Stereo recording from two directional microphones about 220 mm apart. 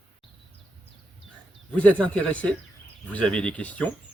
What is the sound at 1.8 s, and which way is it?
Speech, 5° left (ahead or behind).